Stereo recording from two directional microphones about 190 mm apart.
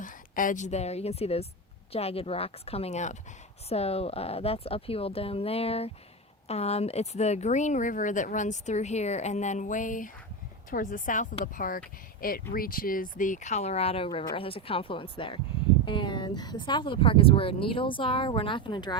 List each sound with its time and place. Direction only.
0.0 s a woman's voice: 45° left (ahead or behind); by 18.9 s 25° left (ahead or behind)